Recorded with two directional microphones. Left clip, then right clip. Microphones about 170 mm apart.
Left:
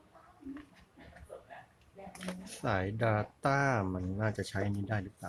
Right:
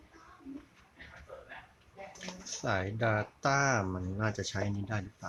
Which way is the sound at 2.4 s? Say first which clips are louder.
Right 1 dB; 5° left (ahead or behind).